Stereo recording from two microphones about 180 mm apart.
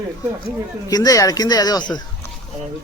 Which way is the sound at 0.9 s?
20° left (ahead or behind).